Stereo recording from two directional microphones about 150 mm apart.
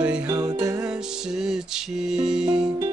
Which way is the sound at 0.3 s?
25° right (ahead or behind).